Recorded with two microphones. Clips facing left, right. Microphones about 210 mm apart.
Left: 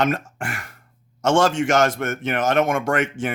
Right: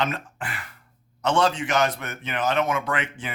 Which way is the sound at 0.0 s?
45° left (ahead or behind).